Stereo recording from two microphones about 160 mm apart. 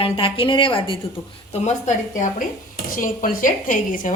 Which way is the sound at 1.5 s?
45° left (ahead or behind).